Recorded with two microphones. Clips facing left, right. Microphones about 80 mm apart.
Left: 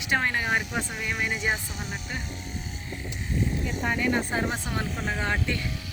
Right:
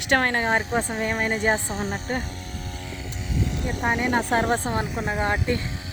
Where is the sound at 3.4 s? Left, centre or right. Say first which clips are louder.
Even; right.